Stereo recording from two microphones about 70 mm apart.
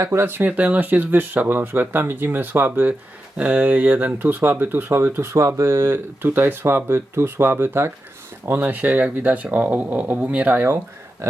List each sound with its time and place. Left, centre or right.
0.0 s speech: right
0.4 s speech: right
3.3 s speech: centre; by 5.3 s right
5.3 s speech: right
5.9 s speech: right